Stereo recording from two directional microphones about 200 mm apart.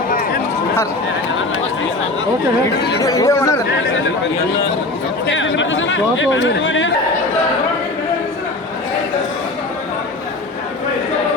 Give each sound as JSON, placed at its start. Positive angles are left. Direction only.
{"t": 3.0, "sound": "speech", "side_deg": 15}
{"t": 5.3, "sound": "speech", "side_deg": 70}